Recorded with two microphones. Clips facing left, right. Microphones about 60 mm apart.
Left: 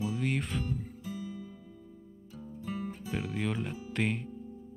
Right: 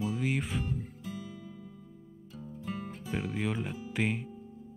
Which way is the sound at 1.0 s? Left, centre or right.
Right.